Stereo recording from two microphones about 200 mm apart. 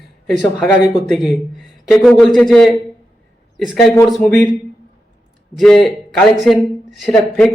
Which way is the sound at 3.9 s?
5° left (ahead or behind).